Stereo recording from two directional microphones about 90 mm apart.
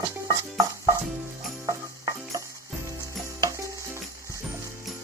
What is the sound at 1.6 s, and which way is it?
Stir, 45° right (ahead or behind).